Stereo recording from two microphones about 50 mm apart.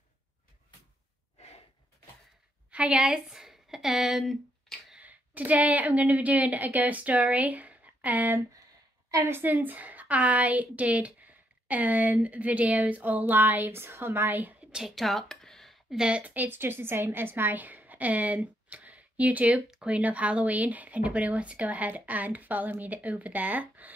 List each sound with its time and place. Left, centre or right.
2.7 s a woman's voice: centre
4.9 s a woman's voice: right
14.8 s speech: centre
16.1 s a woman's voice: right
16.4 s a woman's voice: right
19.7 s speech: centre
20.0 s a woman's voice: right